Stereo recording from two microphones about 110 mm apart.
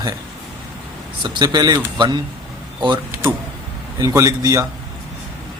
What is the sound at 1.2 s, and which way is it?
Speech, 40° right (ahead or behind).